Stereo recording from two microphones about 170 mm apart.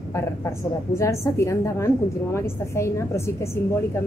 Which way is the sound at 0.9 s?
15° left (ahead or behind).